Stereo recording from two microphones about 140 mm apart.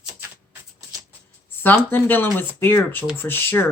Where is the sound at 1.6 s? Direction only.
15° left (ahead or behind).